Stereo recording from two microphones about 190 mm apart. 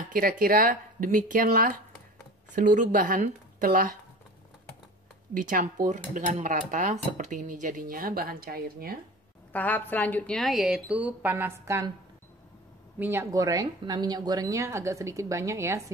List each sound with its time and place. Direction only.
0.0 s cutlery: 45° right (ahead or behind)
5.3 s cutlery: 45° right (ahead or behind)
9.5 s a woman's voice: 10° left (ahead or behind); by 11.9 s 15° right (ahead or behind)
13.0 s a woman's voice: 15° right (ahead or behind)